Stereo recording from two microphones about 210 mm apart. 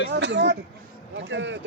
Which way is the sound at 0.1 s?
55° right (ahead or behind).